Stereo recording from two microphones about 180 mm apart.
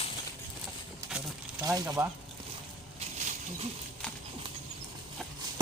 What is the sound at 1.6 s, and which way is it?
Speech, 20° right (ahead or behind).